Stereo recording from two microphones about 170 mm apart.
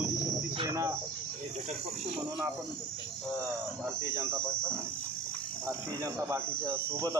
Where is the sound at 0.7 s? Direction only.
20° right (ahead or behind).